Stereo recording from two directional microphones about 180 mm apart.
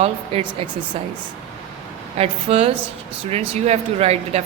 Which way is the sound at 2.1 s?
35° right (ahead or behind).